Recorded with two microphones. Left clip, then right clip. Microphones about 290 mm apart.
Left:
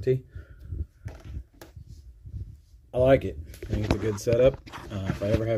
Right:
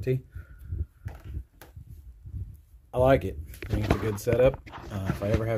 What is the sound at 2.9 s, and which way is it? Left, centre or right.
Speech, centre.